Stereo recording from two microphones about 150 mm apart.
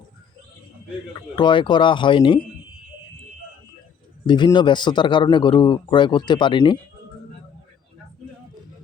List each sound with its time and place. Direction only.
1.4 s speech: 30° left (ahead or behind)
4.3 s speech: 30° left (ahead or behind)